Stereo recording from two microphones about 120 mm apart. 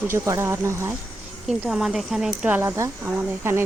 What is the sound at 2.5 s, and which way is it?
Speech, 20° right (ahead or behind).